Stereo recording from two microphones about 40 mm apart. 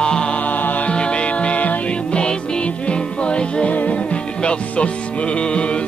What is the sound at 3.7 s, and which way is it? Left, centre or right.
Music, left.